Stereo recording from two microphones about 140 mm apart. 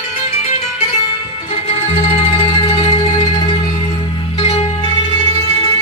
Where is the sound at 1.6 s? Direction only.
50° left (ahead or behind).